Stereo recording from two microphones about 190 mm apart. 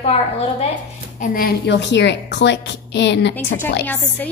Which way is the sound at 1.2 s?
50° left (ahead or behind).